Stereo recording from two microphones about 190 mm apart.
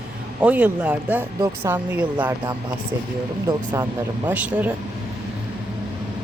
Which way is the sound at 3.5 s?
20° right (ahead or behind).